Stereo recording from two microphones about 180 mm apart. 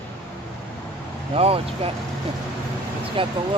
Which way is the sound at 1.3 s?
35° right (ahead or behind).